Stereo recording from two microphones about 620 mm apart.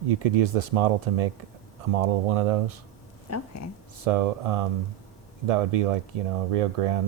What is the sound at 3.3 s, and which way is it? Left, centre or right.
Speech, left.